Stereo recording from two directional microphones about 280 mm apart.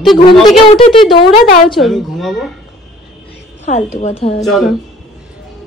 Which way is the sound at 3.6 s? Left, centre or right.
Left.